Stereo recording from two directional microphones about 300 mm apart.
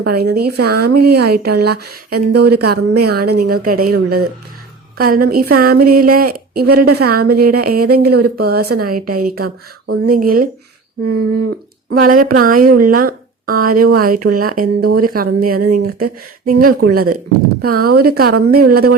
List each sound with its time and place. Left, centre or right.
0.0 s a woman's voice: right
9.4 s speech: right
10.1 s a woman's voice: right
11.0 s speech: right
11.9 s a woman's voice: right
15.5 s speech: right
15.8 s a woman's voice: right